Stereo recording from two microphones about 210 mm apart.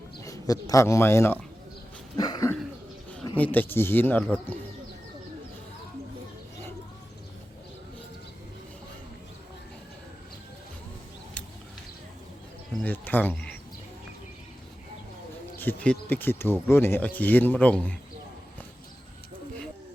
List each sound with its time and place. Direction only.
0.2 s speech: 15° left (ahead or behind)
2.1 s a sound: 20° left (ahead or behind)
3.3 s speech: 10° left (ahead or behind)
12.8 s speech: 10° left (ahead or behind)
15.5 s speech: 10° left (ahead or behind)